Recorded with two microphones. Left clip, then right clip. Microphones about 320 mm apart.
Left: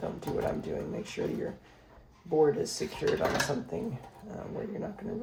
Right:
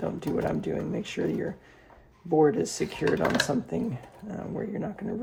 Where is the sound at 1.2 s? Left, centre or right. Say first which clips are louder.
Right 4 dB; right.